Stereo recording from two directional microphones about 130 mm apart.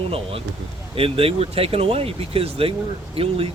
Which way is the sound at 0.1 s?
45° right (ahead or behind).